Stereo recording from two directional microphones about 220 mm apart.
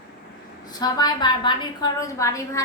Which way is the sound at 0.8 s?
20° left (ahead or behind).